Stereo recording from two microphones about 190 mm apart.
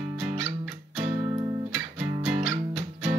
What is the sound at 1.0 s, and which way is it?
Music, 30° right (ahead or behind).